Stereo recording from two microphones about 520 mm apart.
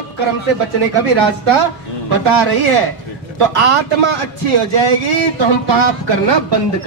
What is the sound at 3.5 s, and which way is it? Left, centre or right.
Speech, right.